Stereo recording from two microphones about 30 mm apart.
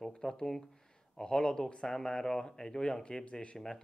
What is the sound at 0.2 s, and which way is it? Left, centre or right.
A man's voice, left.